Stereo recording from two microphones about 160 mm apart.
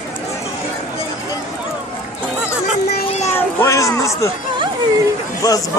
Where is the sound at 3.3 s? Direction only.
15° left (ahead or behind).